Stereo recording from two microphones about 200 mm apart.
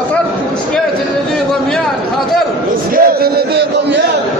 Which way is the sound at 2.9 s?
50° right (ahead or behind).